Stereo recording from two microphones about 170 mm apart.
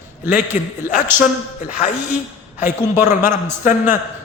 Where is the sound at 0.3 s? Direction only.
45° left (ahead or behind).